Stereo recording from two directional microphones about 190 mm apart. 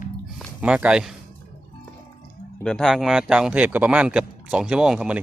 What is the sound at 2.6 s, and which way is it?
Speech, 5° left (ahead or behind).